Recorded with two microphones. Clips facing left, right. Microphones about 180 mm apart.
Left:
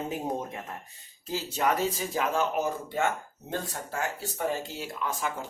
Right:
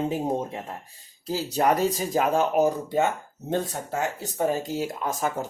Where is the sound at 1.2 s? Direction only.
40° right (ahead or behind).